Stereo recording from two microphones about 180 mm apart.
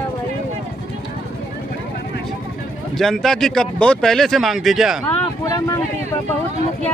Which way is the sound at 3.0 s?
Centre (ahead or behind).